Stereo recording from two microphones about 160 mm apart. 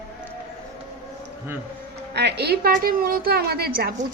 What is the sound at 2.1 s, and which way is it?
A woman's voice, 90° right.